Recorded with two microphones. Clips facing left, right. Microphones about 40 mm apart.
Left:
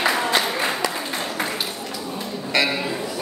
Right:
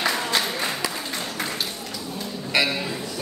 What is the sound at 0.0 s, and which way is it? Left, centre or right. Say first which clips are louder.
Applause: left 4 dB; centre.